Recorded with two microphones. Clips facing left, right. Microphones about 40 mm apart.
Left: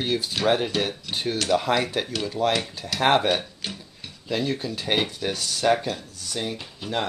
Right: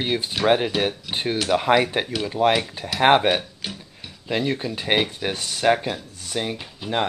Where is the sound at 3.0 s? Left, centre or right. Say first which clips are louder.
Right 4 dB; right.